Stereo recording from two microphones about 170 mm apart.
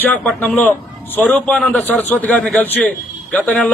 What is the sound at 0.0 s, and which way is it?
A man's voice, 10° left (ahead or behind).